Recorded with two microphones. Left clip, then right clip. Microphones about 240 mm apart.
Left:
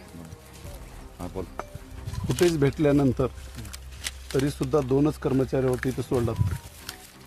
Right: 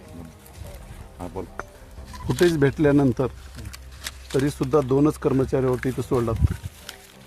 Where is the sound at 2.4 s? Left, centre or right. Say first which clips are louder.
Right 3 dB; right.